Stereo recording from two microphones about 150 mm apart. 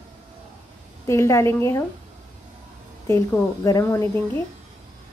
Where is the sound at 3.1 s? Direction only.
20° left (ahead or behind).